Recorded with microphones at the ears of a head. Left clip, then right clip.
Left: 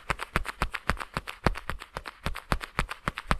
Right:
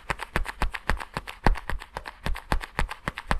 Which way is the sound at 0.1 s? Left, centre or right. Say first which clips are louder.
Even; centre.